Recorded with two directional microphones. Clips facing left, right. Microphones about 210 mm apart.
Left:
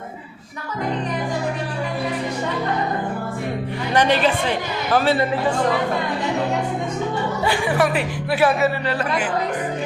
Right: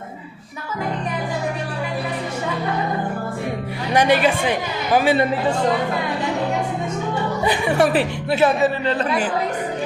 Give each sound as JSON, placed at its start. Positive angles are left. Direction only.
{"t": 3.9, "sound": "a man's voice", "side_deg": -10}
{"t": 7.4, "sound": "speech", "side_deg": -20}